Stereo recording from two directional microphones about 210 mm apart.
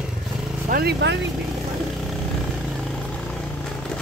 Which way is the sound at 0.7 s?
45° right (ahead or behind).